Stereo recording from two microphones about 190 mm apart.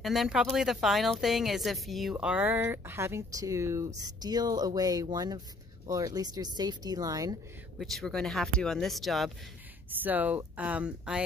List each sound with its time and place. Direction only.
0.0 s speech: centre (ahead or behind); by 7.3 s 20° right (ahead or behind)
7.8 s speech: centre (ahead or behind)